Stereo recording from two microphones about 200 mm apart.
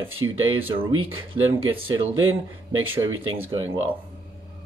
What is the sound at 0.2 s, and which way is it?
Speech, 20° right (ahead or behind).